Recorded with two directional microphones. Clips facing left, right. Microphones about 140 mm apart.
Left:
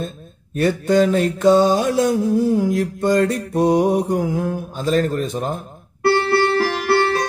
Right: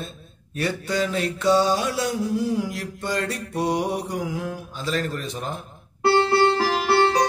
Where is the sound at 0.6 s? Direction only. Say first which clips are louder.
Left 9 dB; 45° left (ahead or behind).